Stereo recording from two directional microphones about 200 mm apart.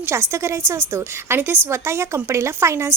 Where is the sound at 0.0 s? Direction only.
15° right (ahead or behind).